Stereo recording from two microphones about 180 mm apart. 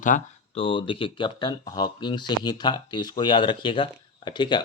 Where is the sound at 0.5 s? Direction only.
30° left (ahead or behind).